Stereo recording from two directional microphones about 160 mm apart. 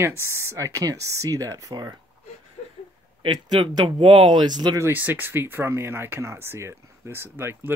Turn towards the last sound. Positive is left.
turn(degrees=-15)  # may be behind; listen again after turning